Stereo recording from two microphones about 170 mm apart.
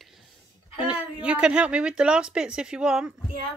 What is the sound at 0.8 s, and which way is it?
Speech, 5° right (ahead or behind).